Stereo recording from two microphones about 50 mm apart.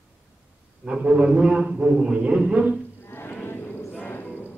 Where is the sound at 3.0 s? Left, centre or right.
Left.